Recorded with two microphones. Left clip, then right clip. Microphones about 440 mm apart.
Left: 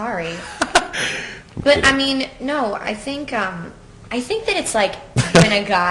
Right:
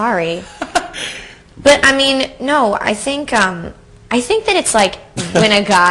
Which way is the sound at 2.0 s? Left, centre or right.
Right.